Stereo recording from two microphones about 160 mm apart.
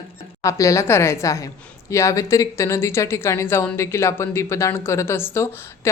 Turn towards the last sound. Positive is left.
turn(degrees=15)  # may be behind; listen again after turning